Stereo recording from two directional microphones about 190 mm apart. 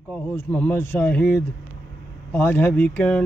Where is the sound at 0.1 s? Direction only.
10° left (ahead or behind).